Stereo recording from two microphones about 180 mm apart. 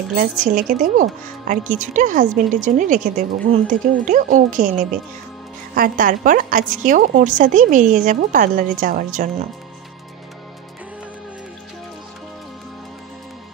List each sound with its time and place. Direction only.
0.1 s a woman's voice: 50° right (ahead or behind)